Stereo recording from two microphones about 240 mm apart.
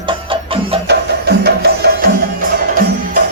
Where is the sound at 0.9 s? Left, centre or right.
Right.